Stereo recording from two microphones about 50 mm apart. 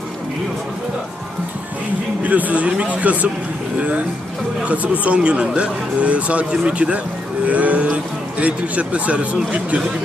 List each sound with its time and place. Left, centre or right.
2.2 s a man's voice: right